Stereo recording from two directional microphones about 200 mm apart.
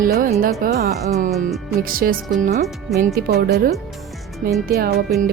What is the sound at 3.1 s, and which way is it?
Speech, 50° right (ahead or behind).